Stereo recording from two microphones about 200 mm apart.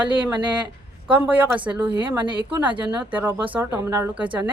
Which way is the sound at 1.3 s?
10° right (ahead or behind).